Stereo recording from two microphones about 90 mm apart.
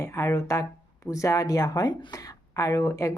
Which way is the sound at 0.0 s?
30° left (ahead or behind).